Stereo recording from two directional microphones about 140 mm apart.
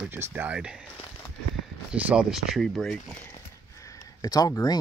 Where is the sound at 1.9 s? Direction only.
10° right (ahead or behind).